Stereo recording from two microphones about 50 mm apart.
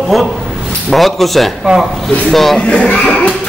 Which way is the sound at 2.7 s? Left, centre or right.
Centre.